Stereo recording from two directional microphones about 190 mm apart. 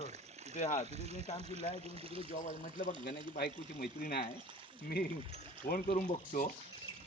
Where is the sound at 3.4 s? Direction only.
55° left (ahead or behind).